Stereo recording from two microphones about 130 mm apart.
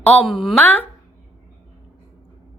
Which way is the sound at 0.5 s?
15° left (ahead or behind).